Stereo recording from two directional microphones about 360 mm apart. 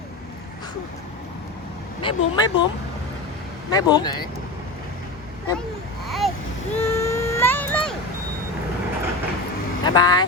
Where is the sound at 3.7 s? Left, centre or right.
Centre.